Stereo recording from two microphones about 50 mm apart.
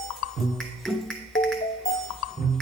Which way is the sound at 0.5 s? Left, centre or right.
Centre.